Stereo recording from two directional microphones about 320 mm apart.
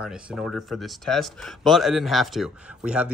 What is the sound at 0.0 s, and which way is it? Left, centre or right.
Speech, centre.